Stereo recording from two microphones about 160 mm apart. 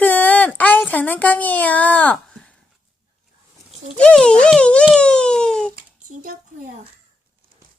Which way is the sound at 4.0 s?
5° left (ahead or behind).